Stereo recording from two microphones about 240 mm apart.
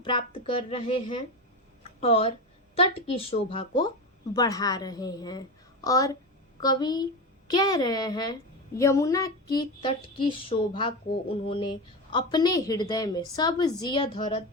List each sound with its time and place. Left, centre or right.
0.0 s a woman's voice: left
1.8 s a sound: left
2.7 s a woman's voice: left